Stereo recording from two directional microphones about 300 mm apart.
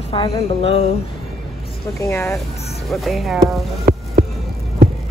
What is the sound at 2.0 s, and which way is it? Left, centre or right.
Speech, centre.